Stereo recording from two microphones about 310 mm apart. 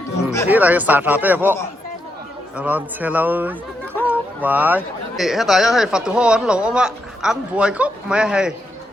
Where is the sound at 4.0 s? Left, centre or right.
Centre.